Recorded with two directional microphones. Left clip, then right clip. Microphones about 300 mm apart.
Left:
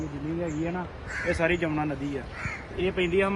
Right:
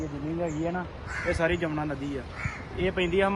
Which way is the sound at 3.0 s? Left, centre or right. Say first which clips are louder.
Even; centre.